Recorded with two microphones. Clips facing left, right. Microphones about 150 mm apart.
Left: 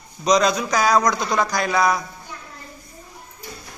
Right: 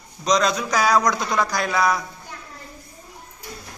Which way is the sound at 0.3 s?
5° left (ahead or behind).